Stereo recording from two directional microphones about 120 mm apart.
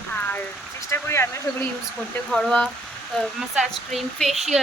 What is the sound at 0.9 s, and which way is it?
Speech, 20° left (ahead or behind).